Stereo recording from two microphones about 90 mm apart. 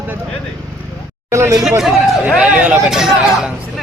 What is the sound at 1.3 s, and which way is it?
Speech, 35° right (ahead or behind).